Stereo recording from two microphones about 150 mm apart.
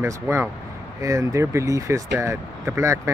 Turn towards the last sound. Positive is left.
turn(degrees=-20)  # may be behind; listen again after turning